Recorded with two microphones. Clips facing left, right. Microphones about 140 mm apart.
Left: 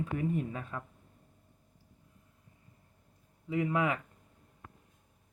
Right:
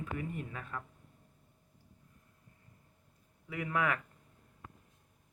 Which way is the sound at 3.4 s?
25° left (ahead or behind).